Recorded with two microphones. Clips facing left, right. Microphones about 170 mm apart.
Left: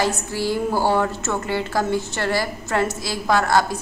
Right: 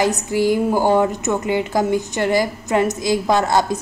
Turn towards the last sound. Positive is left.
turn(degrees=-20)  # may be behind; listen again after turning